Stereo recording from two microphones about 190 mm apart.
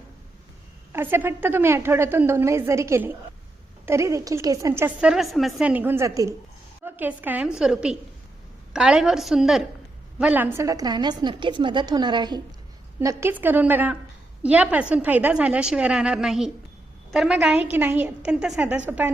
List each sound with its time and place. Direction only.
0.9 s a woman's voice: 10° right (ahead or behind)